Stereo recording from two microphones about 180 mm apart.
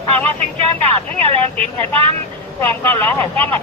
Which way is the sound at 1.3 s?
30° right (ahead or behind).